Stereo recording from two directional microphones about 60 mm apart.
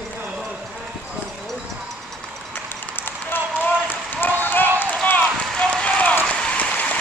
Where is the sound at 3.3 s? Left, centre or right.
Left.